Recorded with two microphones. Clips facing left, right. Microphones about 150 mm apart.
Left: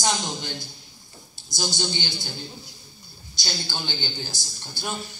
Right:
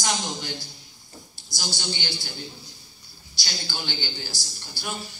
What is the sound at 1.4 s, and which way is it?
Speech, 20° left (ahead or behind).